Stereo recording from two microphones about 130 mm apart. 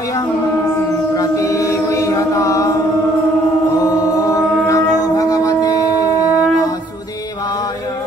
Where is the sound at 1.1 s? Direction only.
25° left (ahead or behind).